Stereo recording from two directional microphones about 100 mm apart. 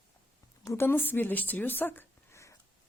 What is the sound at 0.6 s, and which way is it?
A woman's voice, 25° left (ahead or behind).